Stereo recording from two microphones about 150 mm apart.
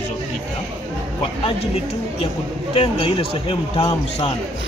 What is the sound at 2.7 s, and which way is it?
A man's voice, 40° left (ahead or behind).